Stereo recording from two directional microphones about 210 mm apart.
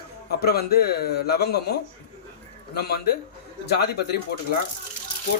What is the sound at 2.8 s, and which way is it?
Speech, 50° left (ahead or behind).